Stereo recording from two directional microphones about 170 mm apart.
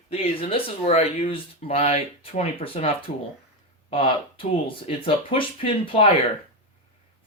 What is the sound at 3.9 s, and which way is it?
Speech, 30° left (ahead or behind).